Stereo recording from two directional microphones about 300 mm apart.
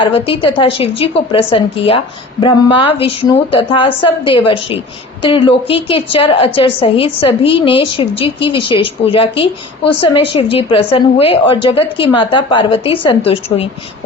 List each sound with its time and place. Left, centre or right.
0.0 s a woman's voice: centre